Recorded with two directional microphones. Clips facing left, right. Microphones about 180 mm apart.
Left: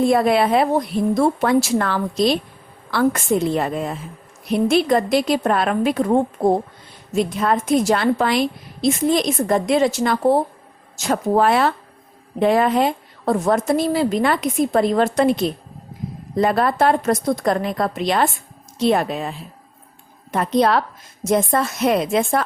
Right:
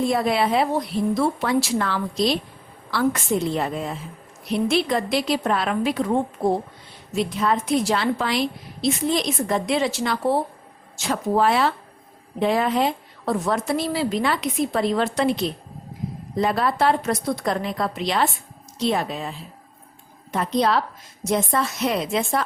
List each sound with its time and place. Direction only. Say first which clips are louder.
0.0 s a woman's voice: left 5 dB; 55° left (ahead or behind)
20.3 s a woman's voice: left 4 dB; 55° left (ahead or behind)